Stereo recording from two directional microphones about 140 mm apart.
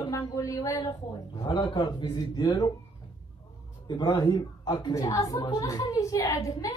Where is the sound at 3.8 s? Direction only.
30° left (ahead or behind).